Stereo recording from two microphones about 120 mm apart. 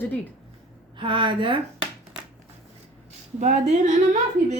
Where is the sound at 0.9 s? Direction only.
45° right (ahead or behind).